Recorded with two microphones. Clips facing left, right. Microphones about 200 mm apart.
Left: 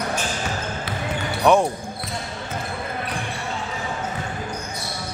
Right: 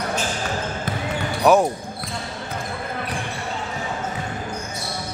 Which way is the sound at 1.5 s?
5° right (ahead or behind).